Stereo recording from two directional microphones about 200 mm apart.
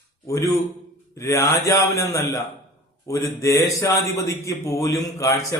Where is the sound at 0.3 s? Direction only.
15° left (ahead or behind).